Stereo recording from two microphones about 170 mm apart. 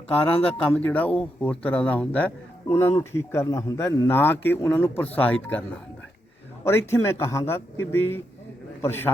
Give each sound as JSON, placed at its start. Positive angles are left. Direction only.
{"t": 0.3, "sound": "speech", "side_deg": 35}
{"t": 0.6, "sound": "speech", "side_deg": 10}